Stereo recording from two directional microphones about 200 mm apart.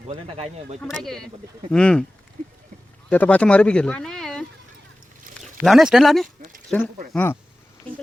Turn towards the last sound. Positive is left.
turn(degrees=10)  # may be behind; listen again after turning